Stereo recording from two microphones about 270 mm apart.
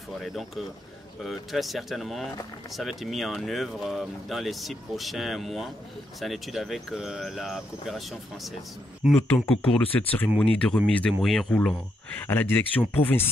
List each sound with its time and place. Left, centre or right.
0.2 s speech: centre